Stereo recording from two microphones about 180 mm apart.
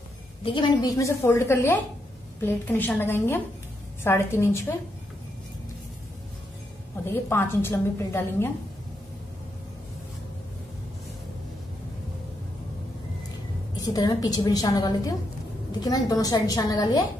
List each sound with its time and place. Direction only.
0.4 s a woman's voice: 30° left (ahead or behind)
7.2 s a woman's voice: 15° left (ahead or behind)
13.7 s a woman's voice: 20° left (ahead or behind)